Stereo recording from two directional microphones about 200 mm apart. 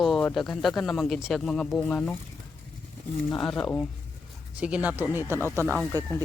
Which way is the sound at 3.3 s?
5° left (ahead or behind).